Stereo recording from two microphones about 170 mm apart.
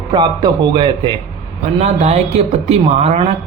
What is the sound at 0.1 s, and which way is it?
A man's voice, 25° right (ahead or behind).